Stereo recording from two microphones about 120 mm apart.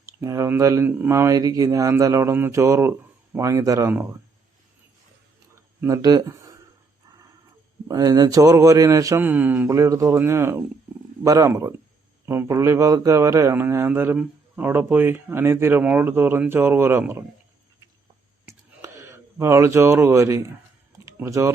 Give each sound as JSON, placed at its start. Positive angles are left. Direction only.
{"t": 0.0, "sound": "speech", "side_deg": -25}
{"t": 5.5, "sound": "a sound", "side_deg": -25}
{"t": 7.9, "sound": "speech", "side_deg": -30}
{"t": 9.2, "sound": "speech", "side_deg": -15}
{"t": 9.7, "sound": "speech", "side_deg": -30}
{"t": 18.4, "sound": "a sound", "side_deg": -25}